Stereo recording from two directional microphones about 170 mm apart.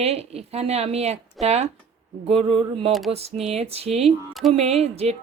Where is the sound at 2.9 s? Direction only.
Centre (ahead or behind).